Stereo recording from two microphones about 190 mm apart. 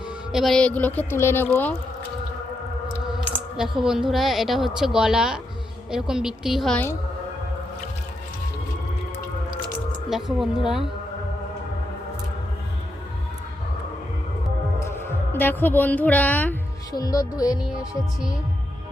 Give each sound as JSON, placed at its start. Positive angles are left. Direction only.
{"t": 0.3, "sound": "speech", "side_deg": 0}
{"t": 3.2, "sound": "a woman's voice", "side_deg": -5}
{"t": 10.1, "sound": "a woman's voice", "side_deg": 0}
{"t": 14.8, "sound": "a woman's voice", "side_deg": 10}
{"t": 16.9, "sound": "speech", "side_deg": 20}